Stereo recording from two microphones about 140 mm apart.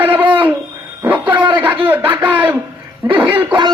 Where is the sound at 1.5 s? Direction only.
10° right (ahead or behind).